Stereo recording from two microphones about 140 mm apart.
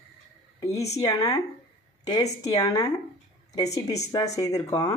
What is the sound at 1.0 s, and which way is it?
Speech, 25° left (ahead or behind).